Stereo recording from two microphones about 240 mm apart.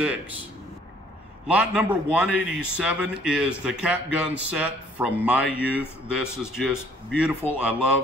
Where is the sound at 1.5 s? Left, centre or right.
Centre.